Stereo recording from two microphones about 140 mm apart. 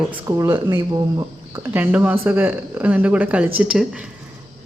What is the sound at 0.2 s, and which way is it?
Speech, 20° right (ahead or behind).